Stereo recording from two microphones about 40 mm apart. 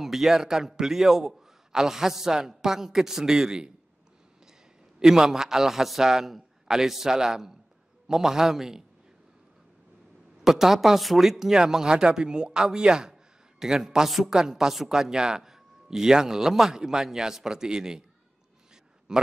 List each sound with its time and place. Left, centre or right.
0.0 s a man's voice: centre
5.0 s a man's voice: centre
10.4 s a man's voice: centre
13.1 s a sound: centre
14.0 s a woman's voice: centre
14.3 s a man's voice: centre
19.1 s a man's voice: centre